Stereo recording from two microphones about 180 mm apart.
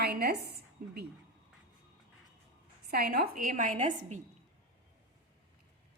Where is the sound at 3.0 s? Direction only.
55° right (ahead or behind).